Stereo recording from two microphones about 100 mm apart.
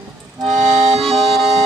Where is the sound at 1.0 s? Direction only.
Centre (ahead or behind).